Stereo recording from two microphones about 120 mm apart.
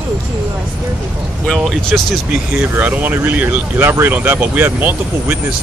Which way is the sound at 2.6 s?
15° right (ahead or behind).